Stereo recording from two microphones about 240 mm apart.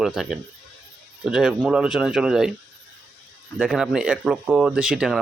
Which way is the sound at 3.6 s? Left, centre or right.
Centre.